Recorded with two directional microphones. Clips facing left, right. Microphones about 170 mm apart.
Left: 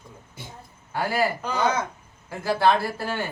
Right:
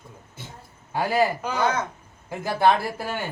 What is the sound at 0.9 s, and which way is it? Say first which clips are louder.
Speech: right 3 dB; 20° right (ahead or behind).